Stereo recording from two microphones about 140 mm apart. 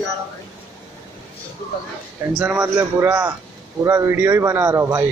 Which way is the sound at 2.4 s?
15° right (ahead or behind).